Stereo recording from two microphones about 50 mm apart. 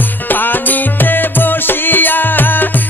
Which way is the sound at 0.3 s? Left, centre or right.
Left.